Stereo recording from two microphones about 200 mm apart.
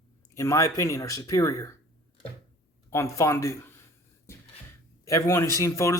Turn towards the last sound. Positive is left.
turn(degrees=15)  # may be behind; listen again after turning